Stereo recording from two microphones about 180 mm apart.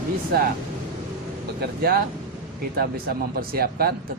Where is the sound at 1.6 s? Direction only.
55° right (ahead or behind).